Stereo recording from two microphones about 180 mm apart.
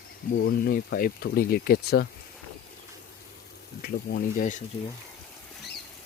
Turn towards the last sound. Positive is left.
turn(degrees=45)  # may be behind; listen again after turning